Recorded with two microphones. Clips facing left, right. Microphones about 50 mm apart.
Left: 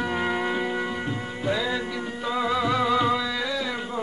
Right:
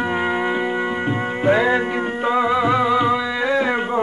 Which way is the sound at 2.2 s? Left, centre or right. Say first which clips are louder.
Right 6 dB; right.